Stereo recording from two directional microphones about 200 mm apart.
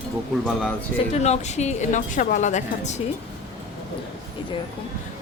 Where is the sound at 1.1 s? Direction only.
35° left (ahead or behind).